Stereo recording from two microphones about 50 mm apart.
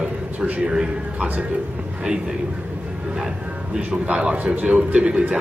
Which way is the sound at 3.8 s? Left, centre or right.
Right.